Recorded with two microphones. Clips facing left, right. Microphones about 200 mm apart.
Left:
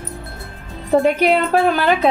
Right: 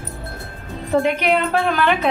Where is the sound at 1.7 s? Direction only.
35° left (ahead or behind).